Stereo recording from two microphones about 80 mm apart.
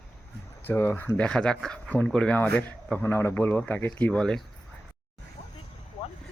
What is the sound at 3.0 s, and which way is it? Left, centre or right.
A man's voice, left.